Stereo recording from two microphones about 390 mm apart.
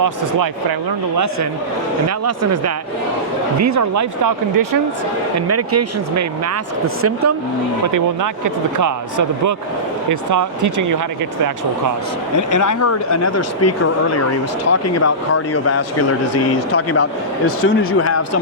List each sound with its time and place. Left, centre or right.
1.1 s speech: right
5.5 s speech: right
7.9 s speech: right
12.4 s speech: left